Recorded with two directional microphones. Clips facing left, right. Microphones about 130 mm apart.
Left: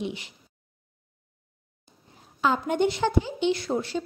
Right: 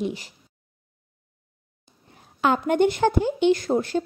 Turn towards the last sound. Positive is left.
turn(degrees=-45)  # may be behind; listen again after turning